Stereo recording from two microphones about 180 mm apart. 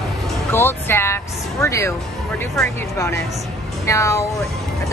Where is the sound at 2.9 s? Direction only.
15° left (ahead or behind).